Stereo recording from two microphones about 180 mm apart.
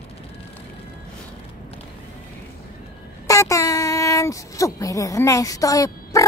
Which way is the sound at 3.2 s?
15° left (ahead or behind).